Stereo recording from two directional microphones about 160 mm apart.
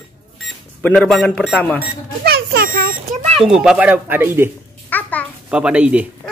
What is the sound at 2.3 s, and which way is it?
Smoke detector, 75° right (ahead or behind).